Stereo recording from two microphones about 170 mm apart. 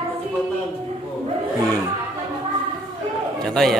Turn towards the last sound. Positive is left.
turn(degrees=5)  # may be behind; listen again after turning